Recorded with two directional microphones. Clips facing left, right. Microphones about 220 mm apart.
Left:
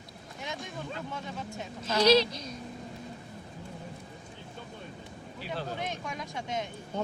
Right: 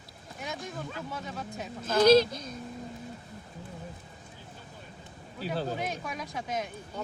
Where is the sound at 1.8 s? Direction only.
50° right (ahead or behind).